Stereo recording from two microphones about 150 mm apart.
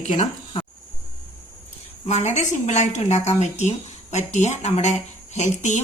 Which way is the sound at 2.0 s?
50° left (ahead or behind).